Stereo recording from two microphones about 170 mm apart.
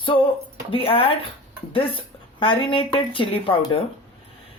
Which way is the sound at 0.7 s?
35° left (ahead or behind).